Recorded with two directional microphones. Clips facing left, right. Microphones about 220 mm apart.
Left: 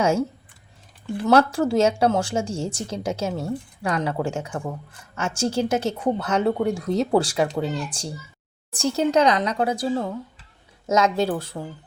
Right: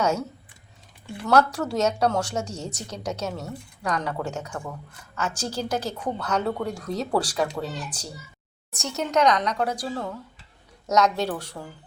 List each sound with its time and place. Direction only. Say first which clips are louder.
0.0 s speech: left 4 dB; 30° left (ahead or behind)
1.3 s a woman's voice: left 3 dB; 25° left (ahead or behind)